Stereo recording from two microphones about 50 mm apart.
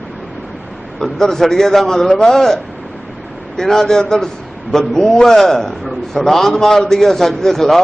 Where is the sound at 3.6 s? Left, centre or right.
Centre.